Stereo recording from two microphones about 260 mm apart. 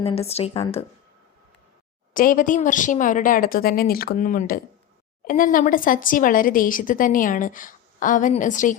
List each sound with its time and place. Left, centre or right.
0.0 s a woman's voice: left
2.1 s speech: left